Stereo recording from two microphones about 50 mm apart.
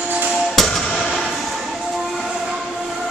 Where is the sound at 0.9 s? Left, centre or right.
Centre.